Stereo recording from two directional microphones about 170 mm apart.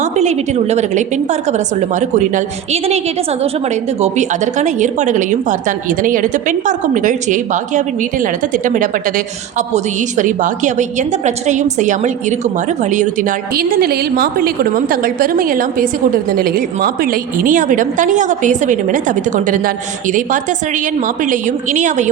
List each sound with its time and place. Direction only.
0.0 s a woman's voice: 40° right (ahead or behind)